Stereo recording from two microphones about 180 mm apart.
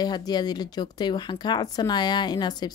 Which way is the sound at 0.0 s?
20° left (ahead or behind).